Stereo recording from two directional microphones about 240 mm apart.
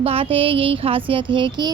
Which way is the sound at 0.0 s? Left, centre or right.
Right.